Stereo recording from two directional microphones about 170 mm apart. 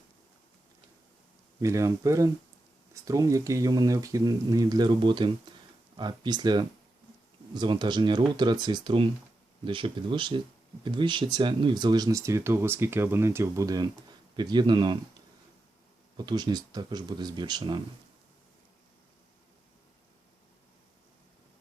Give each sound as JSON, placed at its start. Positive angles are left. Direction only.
{"t": 1.6, "sound": "speech", "side_deg": -20}
{"t": 16.1, "sound": "speech", "side_deg": -25}